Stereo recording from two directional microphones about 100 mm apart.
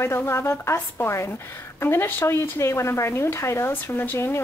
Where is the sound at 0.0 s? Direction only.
25° left (ahead or behind).